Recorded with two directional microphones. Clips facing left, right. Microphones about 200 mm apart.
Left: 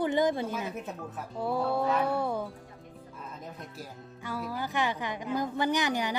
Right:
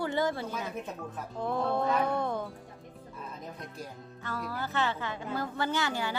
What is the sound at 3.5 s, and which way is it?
Speech, 5° left (ahead or behind).